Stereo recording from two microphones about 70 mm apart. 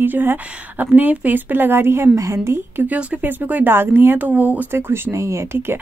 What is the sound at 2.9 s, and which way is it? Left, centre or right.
Speech, right.